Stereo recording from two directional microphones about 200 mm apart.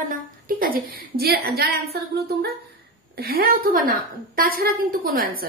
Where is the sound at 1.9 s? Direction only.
55° right (ahead or behind).